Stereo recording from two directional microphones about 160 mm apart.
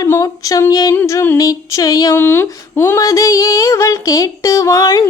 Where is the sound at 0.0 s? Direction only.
20° left (ahead or behind).